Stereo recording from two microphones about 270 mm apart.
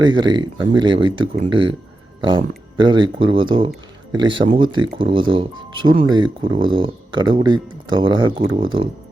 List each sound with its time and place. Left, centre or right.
0.0 s speech: centre
2.7 s speech: centre